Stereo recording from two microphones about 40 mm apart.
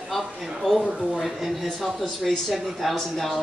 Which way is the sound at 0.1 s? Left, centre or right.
Centre.